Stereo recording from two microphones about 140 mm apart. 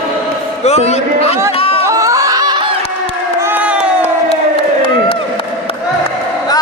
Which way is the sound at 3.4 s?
15° right (ahead or behind).